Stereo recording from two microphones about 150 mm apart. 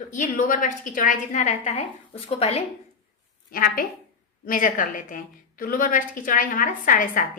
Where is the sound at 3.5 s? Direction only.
75° left (ahead or behind).